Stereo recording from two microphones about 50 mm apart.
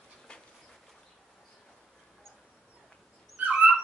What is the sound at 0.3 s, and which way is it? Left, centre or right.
Dog, left.